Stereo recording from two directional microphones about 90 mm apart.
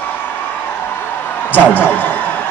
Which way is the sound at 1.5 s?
20° left (ahead or behind).